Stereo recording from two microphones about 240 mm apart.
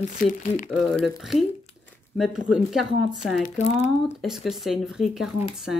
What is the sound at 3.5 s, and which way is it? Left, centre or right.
Speech, left.